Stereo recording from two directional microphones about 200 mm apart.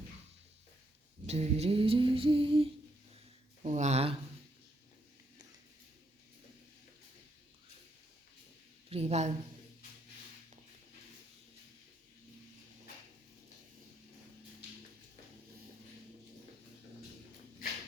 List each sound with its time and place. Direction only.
1.3 s female singing: 30° right (ahead or behind)
3.6 s speech: 35° right (ahead or behind)
8.9 s speech: 30° right (ahead or behind)